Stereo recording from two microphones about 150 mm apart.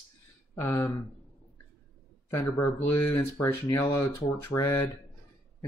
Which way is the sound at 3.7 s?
25° left (ahead or behind).